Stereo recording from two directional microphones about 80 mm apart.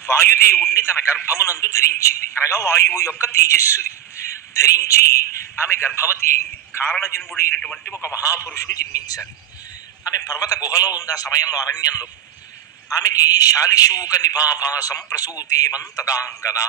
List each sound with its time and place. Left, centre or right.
0.0 s speech: left
7.5 s speech: centre
7.8 s a man's voice: left